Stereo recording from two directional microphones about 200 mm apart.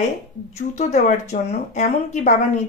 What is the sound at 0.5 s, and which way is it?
Speech, 35° left (ahead or behind).